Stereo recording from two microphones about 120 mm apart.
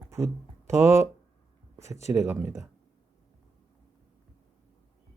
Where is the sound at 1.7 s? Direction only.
25° right (ahead or behind).